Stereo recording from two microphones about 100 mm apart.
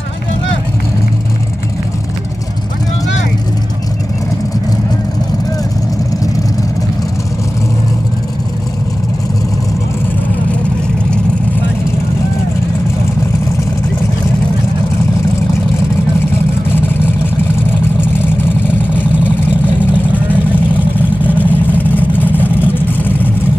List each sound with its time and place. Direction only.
21.3 s vehicle: 20° left (ahead or behind)